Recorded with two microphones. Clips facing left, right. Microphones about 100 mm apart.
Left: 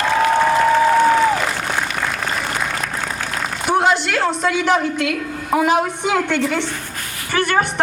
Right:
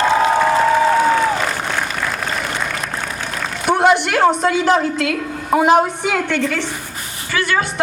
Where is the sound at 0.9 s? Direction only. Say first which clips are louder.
Left 1 dB; 5° right (ahead or behind).